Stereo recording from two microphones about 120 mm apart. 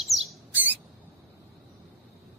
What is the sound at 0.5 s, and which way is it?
Rodents, 15° right (ahead or behind).